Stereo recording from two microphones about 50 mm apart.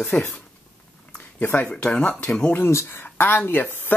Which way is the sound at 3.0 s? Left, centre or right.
Left.